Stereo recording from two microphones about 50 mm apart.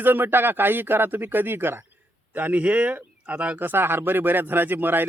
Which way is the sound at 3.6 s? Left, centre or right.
Right.